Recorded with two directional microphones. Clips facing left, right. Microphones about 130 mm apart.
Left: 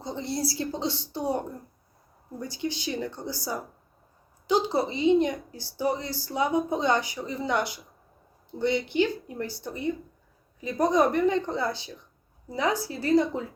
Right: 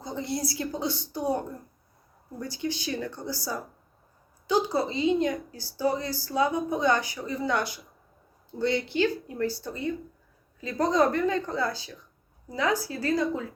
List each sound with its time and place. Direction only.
0.0 s a woman's voice: 25° left (ahead or behind)